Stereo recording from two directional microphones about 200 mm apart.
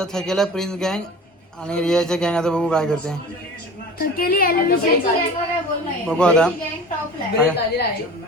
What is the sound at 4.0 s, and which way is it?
Speech, 50° left (ahead or behind).